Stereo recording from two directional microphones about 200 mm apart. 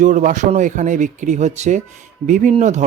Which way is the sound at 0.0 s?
40° right (ahead or behind).